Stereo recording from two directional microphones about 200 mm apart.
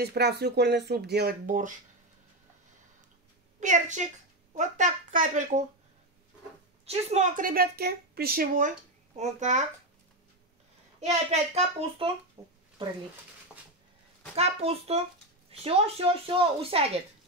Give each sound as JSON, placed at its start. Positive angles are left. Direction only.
{"t": 0.0, "sound": "speech", "side_deg": -55}
{"t": 3.5, "sound": "a woman's voice", "side_deg": -40}
{"t": 6.9, "sound": "a woman's voice", "side_deg": -35}
{"t": 11.0, "sound": "a woman's voice", "side_deg": -35}
{"t": 12.4, "sound": "speech", "side_deg": -20}
{"t": 14.3, "sound": "a woman's voice", "side_deg": -30}